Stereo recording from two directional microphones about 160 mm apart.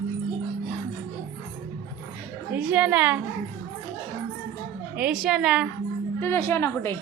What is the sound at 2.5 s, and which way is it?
Speech, 10° right (ahead or behind).